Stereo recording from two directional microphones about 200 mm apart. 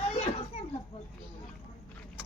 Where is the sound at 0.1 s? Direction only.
30° left (ahead or behind).